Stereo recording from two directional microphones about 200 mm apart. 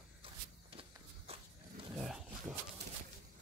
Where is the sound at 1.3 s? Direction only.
30° right (ahead or behind).